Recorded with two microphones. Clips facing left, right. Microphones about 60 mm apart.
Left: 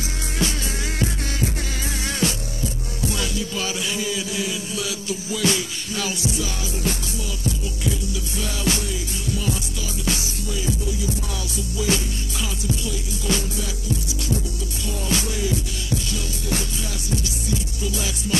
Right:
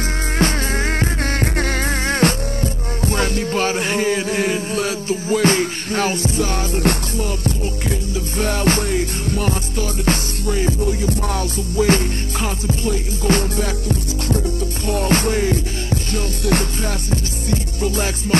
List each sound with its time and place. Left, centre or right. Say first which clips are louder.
0.4 s music: right 7 dB; right